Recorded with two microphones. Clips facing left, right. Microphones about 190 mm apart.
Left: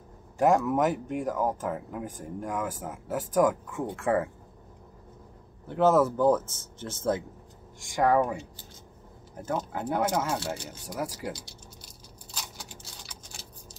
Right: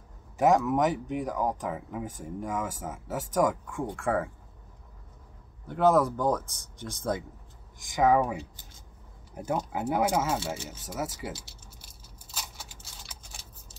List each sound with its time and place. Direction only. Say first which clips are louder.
0.4 s speech: even; centre (ahead or behind)
0.9 s speech: even; 50° left (ahead or behind)
1.2 s speech: left 3 dB; centre (ahead or behind)
5.9 s speech: left 2 dB; 5° left (ahead or behind)
6.5 s speech: left 2 dB; 15° right (ahead or behind)
7.8 s speech: even; centre (ahead or behind)
12.4 s a sound: even; 5° right (ahead or behind)